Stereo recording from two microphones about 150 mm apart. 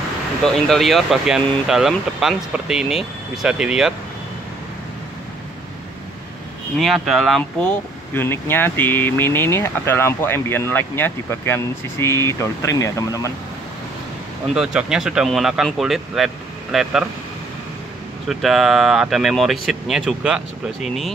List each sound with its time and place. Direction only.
0.7 s speech: centre (ahead or behind)
6.8 s speech: centre (ahead or behind)
8.1 s speech: 15° left (ahead or behind)
14.5 s speech: 5° right (ahead or behind)
18.3 s speech: centre (ahead or behind)